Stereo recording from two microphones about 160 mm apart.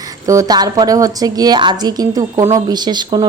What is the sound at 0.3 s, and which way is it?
Speech, 20° right (ahead or behind).